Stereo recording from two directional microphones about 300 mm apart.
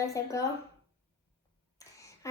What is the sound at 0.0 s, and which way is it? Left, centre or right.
Speech, centre.